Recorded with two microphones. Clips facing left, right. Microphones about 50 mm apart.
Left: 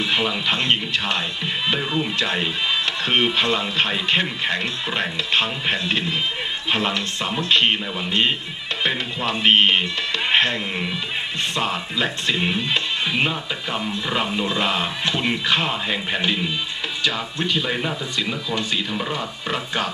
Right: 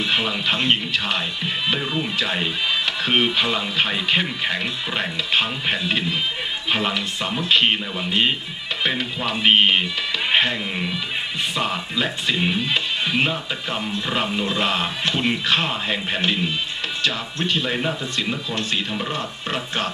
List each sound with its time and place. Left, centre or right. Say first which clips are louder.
0.0 s speech: even; centre
18.1 s speech: even; right